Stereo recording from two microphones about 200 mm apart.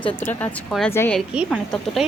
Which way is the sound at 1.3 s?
5° right (ahead or behind).